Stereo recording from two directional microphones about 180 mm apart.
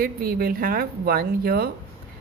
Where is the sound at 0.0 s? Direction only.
55° right (ahead or behind).